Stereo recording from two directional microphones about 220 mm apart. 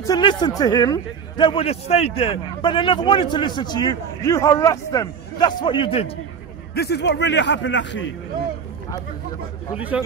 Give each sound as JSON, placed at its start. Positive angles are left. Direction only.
{"t": 0.0, "sound": "a man's voice", "side_deg": 20}
{"t": 6.7, "sound": "a man's voice", "side_deg": 45}
{"t": 9.8, "sound": "a man's voice", "side_deg": -5}